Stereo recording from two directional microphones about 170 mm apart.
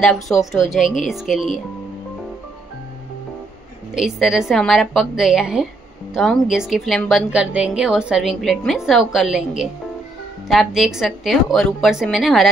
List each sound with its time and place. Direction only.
0.0 s a woman's voice: centre (ahead or behind)
3.9 s a woman's voice: centre (ahead or behind)